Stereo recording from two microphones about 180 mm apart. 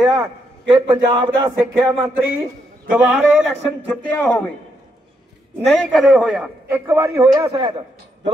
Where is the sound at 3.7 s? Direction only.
10° left (ahead or behind).